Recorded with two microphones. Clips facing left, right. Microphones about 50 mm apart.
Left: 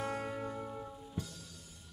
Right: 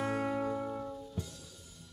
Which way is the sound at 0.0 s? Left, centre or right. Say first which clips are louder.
Right 5 dB; centre.